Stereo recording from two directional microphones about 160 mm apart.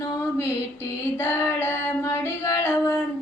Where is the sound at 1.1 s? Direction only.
15° left (ahead or behind).